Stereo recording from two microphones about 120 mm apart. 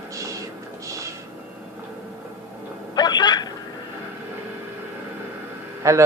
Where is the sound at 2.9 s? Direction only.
35° left (ahead or behind).